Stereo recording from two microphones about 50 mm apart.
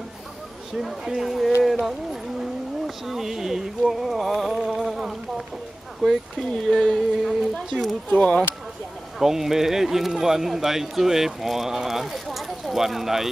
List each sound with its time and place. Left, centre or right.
0.7 s speech: centre
3.1 s speech: centre
6.0 s a sound: centre
8.1 s speech: left
9.2 s speech: centre